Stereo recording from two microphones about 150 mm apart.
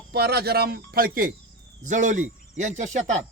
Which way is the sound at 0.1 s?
90° right.